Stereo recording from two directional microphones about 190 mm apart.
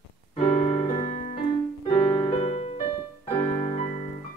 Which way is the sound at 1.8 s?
35° left (ahead or behind).